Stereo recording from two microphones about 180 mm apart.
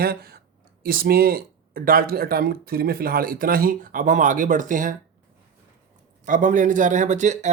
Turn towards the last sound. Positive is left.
turn(degrees=-40)  # may be behind; listen again after turning